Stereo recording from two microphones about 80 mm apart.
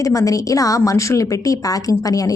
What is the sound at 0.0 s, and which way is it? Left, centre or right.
A woman's voice, left.